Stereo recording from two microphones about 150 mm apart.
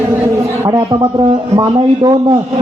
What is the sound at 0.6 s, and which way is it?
A man's voice, 25° right (ahead or behind).